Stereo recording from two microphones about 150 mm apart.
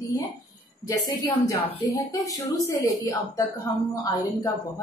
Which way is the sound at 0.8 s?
20° left (ahead or behind).